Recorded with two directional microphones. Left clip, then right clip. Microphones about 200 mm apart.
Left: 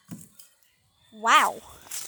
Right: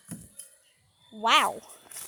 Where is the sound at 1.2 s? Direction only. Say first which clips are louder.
Left 3 dB; centre (ahead or behind).